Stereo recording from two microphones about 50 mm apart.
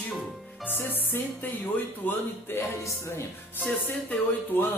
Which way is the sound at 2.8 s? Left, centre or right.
Left.